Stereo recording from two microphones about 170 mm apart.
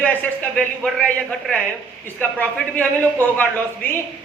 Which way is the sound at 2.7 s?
10° left (ahead or behind).